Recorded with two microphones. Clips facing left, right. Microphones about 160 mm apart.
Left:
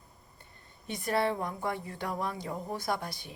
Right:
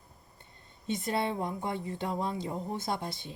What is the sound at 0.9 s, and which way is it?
A woman's voice, 20° right (ahead or behind).